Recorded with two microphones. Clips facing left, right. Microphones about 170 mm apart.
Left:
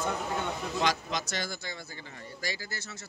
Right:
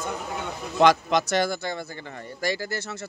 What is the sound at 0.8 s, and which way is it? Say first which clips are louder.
Speech: right 13 dB; 65° right (ahead or behind).